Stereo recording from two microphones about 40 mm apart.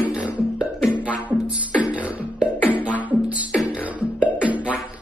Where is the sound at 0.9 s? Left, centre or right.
Right.